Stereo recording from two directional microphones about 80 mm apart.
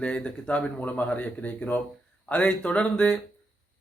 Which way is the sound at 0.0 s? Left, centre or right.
Centre.